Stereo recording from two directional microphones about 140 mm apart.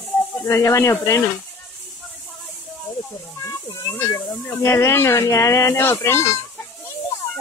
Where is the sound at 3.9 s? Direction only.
15° left (ahead or behind).